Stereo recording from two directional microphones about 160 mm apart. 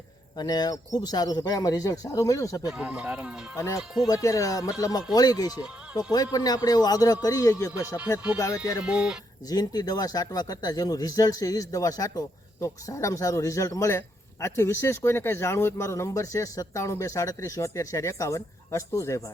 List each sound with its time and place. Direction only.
0.3 s speech: 25° left (ahead or behind)
2.6 s speech: 5° right (ahead or behind)
4.0 s speech: 20° left (ahead or behind)
8.8 s speech: 5° right (ahead or behind)
9.5 s speech: 25° left (ahead or behind)